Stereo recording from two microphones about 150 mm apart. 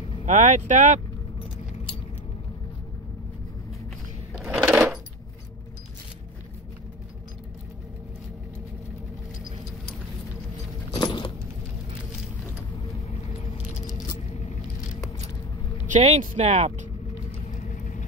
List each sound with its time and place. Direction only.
0.2 s speech: 50° right (ahead or behind)
4.4 s sewing machine: 10° right (ahead or behind)
10.9 s keys jangling: 30° left (ahead or behind)
13.7 s keys jangling: 55° left (ahead or behind)
15.9 s speech: 50° right (ahead or behind)
17.6 s vehicle: 55° left (ahead or behind)